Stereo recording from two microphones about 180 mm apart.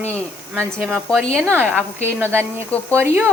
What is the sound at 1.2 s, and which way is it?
A woman's voice, 15° right (ahead or behind).